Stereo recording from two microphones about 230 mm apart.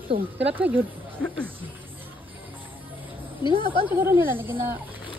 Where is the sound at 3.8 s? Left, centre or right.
Centre.